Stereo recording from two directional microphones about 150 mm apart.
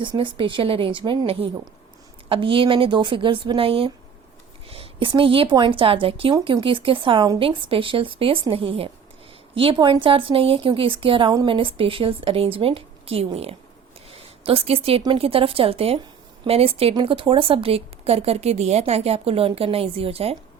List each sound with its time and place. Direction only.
0.0 s speech: 35° right (ahead or behind)